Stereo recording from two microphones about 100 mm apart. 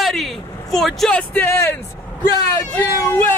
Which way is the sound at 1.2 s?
20° left (ahead or behind).